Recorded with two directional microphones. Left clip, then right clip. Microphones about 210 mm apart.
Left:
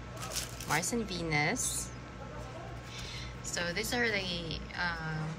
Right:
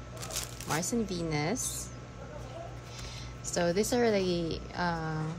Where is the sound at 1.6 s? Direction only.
30° right (ahead or behind).